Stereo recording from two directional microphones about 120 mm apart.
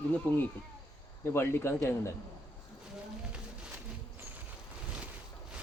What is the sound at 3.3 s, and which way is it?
Music, 10° right (ahead or behind).